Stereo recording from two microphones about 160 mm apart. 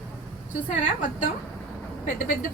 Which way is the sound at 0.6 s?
50° left (ahead or behind).